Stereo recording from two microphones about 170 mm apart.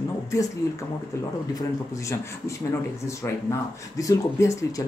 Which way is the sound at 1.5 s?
20° left (ahead or behind).